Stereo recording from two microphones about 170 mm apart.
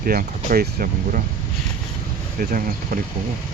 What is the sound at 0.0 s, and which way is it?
Speech, 60° right (ahead or behind).